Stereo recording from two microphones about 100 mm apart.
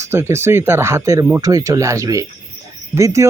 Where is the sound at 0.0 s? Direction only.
25° right (ahead or behind).